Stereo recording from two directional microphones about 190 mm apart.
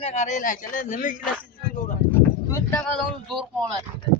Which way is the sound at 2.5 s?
15° left (ahead or behind).